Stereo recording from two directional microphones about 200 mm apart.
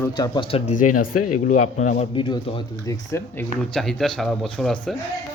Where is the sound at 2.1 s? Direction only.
25° left (ahead or behind); by 5.0 s centre (ahead or behind).